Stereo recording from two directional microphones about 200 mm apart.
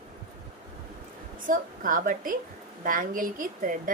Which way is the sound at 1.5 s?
40° right (ahead or behind).